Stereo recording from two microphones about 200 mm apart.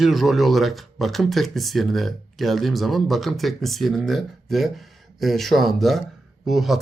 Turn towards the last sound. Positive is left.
turn(degrees=0)  # may be behind; listen again after turning